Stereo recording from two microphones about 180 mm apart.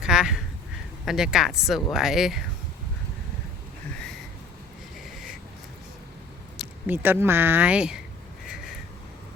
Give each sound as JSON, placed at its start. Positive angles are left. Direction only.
{"t": 0.0, "sound": "a sound", "side_deg": -5}
{"t": 1.0, "sound": "speech", "side_deg": 0}
{"t": 6.6, "sound": "speech", "side_deg": -10}